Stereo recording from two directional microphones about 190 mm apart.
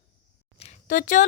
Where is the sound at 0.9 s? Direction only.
45° left (ahead or behind).